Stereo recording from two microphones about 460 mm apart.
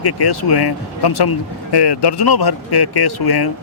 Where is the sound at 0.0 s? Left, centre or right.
Left.